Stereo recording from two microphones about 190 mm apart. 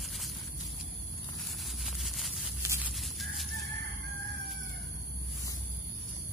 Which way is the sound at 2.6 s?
15° right (ahead or behind).